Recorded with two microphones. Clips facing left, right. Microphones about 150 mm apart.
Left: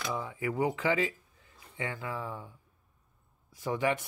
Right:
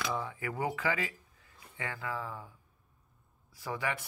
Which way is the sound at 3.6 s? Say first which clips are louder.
Left 6 dB; 20° left (ahead or behind).